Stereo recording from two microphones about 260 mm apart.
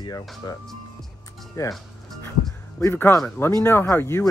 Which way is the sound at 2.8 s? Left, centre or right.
Centre.